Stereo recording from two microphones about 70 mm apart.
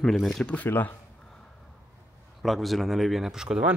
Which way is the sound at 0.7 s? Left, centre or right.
Left.